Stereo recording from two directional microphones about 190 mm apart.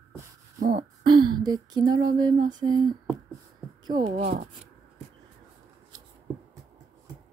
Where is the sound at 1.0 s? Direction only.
25° right (ahead or behind).